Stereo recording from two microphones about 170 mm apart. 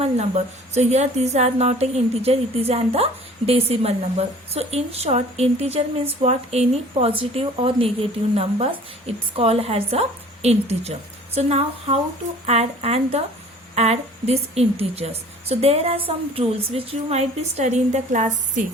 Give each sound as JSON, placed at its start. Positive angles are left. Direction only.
{"t": 0.0, "sound": "a woman's voice", "side_deg": -40}